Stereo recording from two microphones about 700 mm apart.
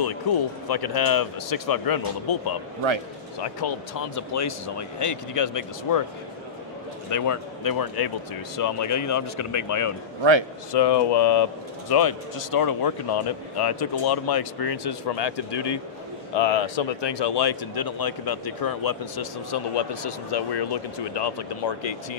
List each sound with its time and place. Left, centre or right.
0.3 s speech: left
3.6 s speech: left
7.1 s a man's voice: left
10.7 s speech: left